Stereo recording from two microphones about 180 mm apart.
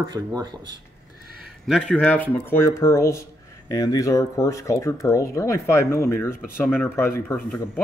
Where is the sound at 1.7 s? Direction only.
5° left (ahead or behind).